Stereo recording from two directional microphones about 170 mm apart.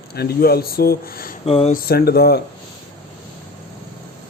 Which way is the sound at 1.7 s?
65° left (ahead or behind).